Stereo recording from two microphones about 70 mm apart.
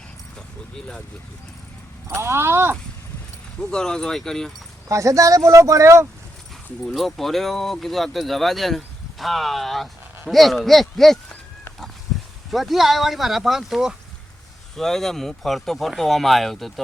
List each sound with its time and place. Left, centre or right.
2.0 s speech: right
3.6 s speech: centre
4.9 s speech: right
6.8 s speech: centre
12.5 s speech: centre